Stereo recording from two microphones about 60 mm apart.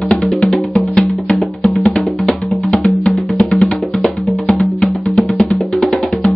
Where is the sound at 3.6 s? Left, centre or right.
Centre.